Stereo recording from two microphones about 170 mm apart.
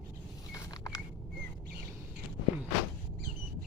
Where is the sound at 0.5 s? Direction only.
20° left (ahead or behind).